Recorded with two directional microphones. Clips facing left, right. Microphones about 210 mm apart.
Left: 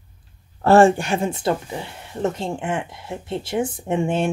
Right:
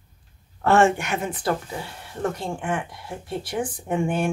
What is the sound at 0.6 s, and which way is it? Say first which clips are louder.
Speech: left 5 dB; 35° left (ahead or behind).